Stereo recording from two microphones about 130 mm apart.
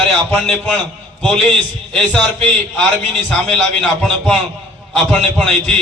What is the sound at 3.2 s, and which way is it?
A man's voice, 5° left (ahead or behind).